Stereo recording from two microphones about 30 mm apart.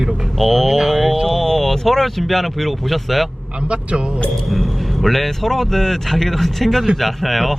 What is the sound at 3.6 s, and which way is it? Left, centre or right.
Speech, right.